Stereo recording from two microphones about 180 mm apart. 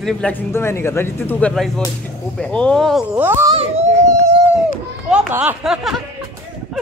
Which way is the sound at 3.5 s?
35° right (ahead or behind).